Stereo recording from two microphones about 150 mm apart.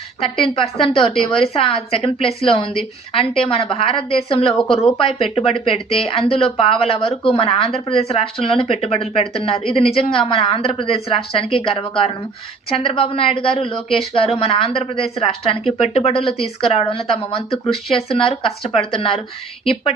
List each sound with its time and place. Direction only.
0.4 s a woman's voice: 35° left (ahead or behind)